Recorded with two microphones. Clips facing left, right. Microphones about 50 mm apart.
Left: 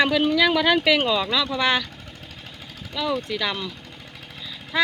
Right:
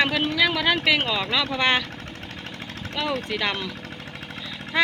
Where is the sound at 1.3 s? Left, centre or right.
Right.